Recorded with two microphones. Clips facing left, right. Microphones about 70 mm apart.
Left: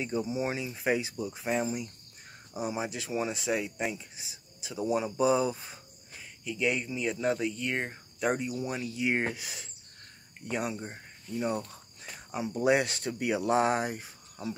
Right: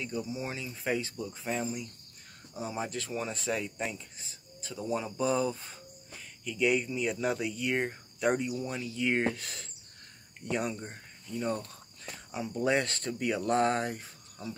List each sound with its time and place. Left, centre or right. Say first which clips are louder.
0.0 s speech: left 5 dB; left